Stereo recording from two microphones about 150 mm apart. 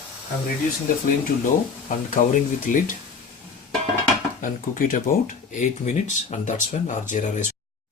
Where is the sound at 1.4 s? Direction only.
60° left (ahead or behind).